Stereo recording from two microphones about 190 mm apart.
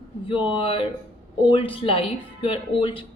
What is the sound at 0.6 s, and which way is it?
Speech, 30° left (ahead or behind).